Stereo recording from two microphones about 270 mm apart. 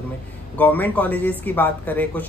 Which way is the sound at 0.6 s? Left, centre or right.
Centre.